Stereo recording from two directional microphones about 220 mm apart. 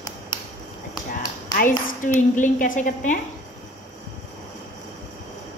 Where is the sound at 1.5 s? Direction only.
40° left (ahead or behind).